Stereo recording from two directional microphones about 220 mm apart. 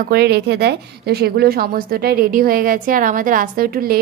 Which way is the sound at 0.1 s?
45° right (ahead or behind).